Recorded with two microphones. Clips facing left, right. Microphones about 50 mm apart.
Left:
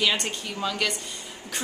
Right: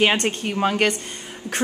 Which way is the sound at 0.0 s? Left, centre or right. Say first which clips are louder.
Right 6 dB; right.